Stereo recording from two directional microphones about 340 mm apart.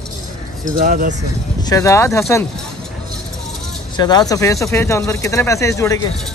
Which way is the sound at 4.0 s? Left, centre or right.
Centre.